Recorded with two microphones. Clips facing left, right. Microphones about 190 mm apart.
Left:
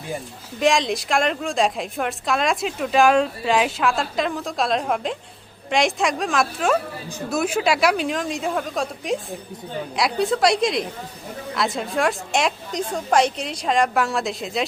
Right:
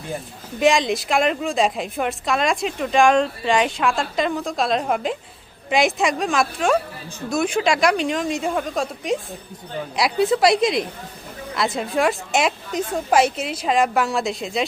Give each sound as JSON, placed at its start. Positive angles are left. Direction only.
{"t": 0.6, "sound": "a woman's voice", "side_deg": 0}